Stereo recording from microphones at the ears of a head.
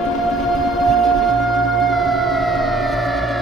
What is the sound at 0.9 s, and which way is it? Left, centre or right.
Music, right.